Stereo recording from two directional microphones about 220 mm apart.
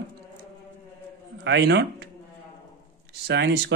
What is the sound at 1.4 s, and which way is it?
Speech, 55° right (ahead or behind).